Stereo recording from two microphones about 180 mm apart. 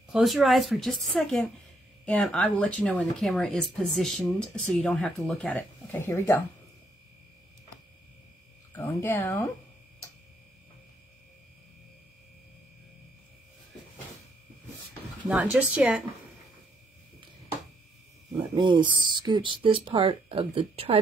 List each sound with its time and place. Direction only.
0.1 s speech: centre (ahead or behind)
8.7 s speech: 10° left (ahead or behind)
15.2 s speech: 5° right (ahead or behind)
18.4 s speech: 25° right (ahead or behind)